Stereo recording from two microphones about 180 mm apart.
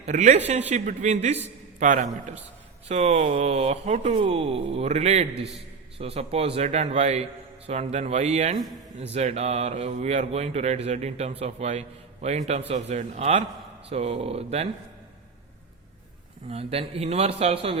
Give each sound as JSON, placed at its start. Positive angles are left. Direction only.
{"t": 0.0, "sound": "a man's voice", "side_deg": -40}
{"t": 16.5, "sound": "speech", "side_deg": -35}